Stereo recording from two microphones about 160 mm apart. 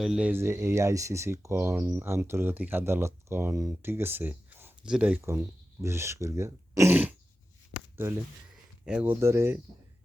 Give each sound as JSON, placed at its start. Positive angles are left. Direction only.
{"t": 0.0, "sound": "speech", "side_deg": -5}